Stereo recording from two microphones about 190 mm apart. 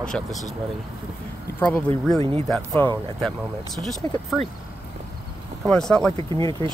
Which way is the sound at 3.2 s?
Centre (ahead or behind).